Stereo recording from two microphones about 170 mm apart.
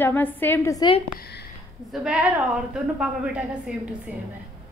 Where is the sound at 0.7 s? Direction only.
30° left (ahead or behind).